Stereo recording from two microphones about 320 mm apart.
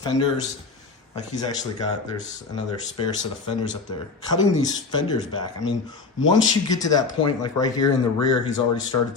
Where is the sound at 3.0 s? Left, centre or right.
Centre.